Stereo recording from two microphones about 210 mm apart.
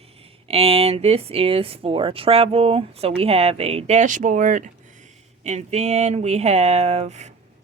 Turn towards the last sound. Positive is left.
turn(degrees=-30)  # may be behind; listen again after turning